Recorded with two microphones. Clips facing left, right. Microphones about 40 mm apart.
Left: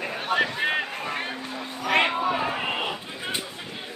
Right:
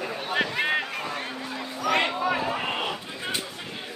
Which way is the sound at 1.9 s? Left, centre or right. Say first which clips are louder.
Left 2 dB; left.